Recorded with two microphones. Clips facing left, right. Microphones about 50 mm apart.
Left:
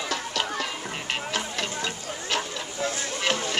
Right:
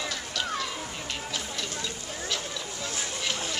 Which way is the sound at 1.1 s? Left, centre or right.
Left.